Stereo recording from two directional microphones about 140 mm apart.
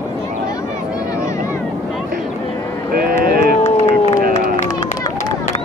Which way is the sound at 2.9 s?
90° right.